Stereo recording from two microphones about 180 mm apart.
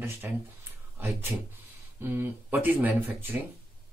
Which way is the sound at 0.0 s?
10° right (ahead or behind).